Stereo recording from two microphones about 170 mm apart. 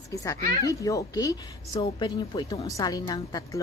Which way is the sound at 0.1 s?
20° left (ahead or behind).